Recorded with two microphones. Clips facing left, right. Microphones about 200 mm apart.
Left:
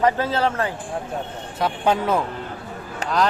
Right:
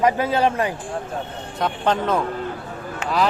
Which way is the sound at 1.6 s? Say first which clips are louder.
Left 1 dB; 10° left (ahead or behind).